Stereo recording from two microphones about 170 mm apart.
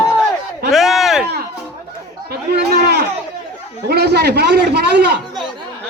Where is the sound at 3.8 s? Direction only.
70° right (ahead or behind).